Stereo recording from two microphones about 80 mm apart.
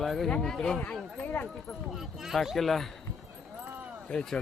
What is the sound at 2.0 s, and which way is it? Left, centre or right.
Speech, centre.